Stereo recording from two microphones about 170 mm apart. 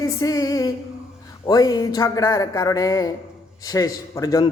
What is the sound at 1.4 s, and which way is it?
A man's voice, 20° left (ahead or behind).